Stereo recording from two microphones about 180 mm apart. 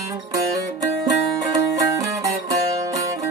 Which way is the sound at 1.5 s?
15° right (ahead or behind).